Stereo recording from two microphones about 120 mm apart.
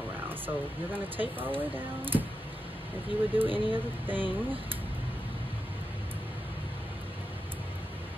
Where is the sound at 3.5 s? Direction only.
45° right (ahead or behind).